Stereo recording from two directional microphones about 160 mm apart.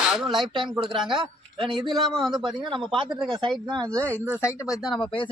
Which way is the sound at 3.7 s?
25° right (ahead or behind).